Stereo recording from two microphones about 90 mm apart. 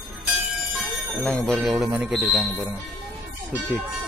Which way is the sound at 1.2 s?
5° left (ahead or behind).